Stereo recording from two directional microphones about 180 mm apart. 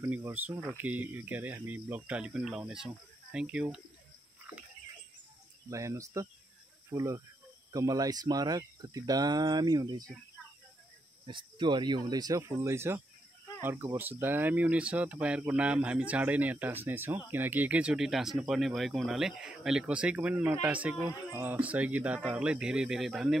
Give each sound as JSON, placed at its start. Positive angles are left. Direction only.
{"t": 0.0, "sound": "speech", "side_deg": -10}
{"t": 5.7, "sound": "speech", "side_deg": -15}
{"t": 11.2, "sound": "speech", "side_deg": -25}